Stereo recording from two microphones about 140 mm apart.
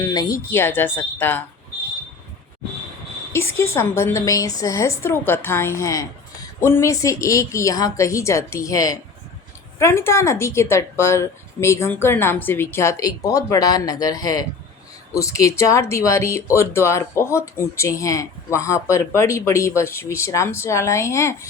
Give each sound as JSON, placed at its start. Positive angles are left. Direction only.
{"t": 0.1, "sound": "speech", "side_deg": 25}
{"t": 0.5, "sound": "speech", "side_deg": 15}
{"t": 3.3, "sound": "speech", "side_deg": 20}